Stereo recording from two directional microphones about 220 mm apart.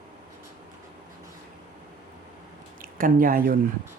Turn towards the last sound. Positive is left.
turn(degrees=-40)  # may be behind; listen again after turning